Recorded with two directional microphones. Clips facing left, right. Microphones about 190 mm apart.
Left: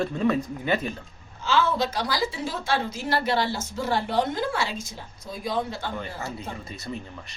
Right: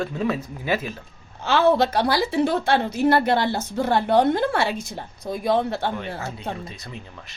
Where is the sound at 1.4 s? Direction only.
60° right (ahead or behind).